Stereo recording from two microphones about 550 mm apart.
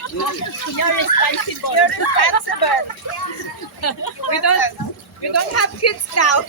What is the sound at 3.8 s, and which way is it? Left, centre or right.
Speech, left.